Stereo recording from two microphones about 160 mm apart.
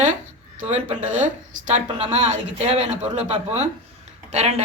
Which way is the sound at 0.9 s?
10° right (ahead or behind).